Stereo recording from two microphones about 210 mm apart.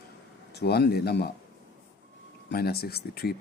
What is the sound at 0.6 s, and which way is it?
Speech, 50° left (ahead or behind).